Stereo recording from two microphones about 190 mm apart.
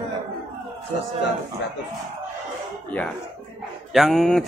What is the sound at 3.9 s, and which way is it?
Speech, centre (ahead or behind).